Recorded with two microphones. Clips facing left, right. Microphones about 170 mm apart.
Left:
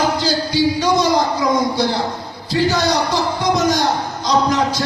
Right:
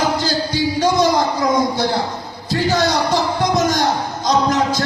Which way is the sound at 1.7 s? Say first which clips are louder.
Even; 50° right (ahead or behind).